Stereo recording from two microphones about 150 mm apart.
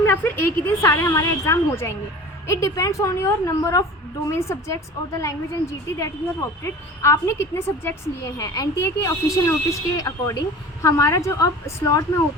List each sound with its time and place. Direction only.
0.0 s a woman's voice: 15° left (ahead or behind)
6.6 s a woman's voice: 20° left (ahead or behind)